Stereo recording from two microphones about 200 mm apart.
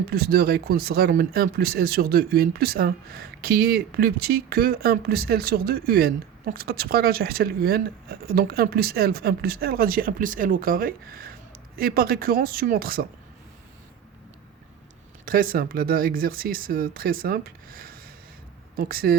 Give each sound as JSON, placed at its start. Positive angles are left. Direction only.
{"t": 0.1, "sound": "speech", "side_deg": -50}
{"t": 15.2, "sound": "speech", "side_deg": -45}